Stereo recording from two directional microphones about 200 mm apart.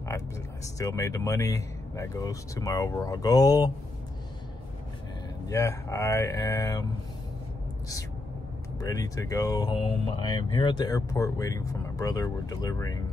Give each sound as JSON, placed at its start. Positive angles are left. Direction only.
{"t": 0.7, "sound": "speech", "side_deg": 15}
{"t": 5.5, "sound": "speech", "side_deg": 15}
{"t": 8.7, "sound": "speech", "side_deg": 15}